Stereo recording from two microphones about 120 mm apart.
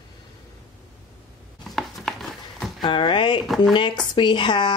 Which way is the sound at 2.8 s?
40° left (ahead or behind).